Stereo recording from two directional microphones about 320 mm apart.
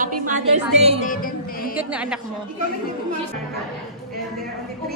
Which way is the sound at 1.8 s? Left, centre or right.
Centre.